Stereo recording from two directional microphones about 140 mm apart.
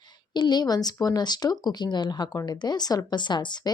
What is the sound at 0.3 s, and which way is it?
Speech, 30° left (ahead or behind).